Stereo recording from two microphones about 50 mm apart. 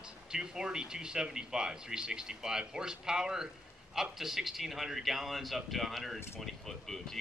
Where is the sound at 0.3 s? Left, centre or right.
Centre.